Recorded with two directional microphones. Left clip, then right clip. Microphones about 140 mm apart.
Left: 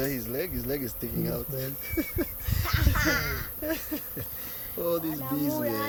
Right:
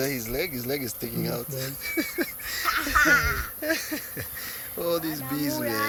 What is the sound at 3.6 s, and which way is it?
A child's voice, 10° right (ahead or behind).